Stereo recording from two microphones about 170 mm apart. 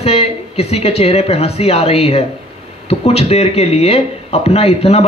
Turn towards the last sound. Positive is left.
turn(degrees=35)  # may be behind; listen again after turning